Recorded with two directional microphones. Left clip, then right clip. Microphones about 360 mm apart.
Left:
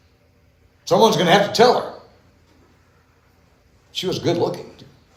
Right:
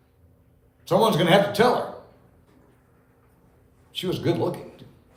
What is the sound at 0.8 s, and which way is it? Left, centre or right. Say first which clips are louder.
Speech: left 5 dB; left.